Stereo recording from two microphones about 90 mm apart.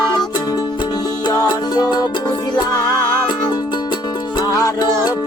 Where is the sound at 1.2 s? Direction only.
55° left (ahead or behind).